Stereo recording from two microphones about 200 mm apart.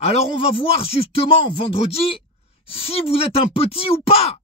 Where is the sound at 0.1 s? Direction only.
30° left (ahead or behind).